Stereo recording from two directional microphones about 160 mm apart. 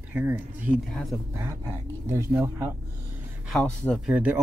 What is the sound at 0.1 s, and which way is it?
Speech, 10° right (ahead or behind).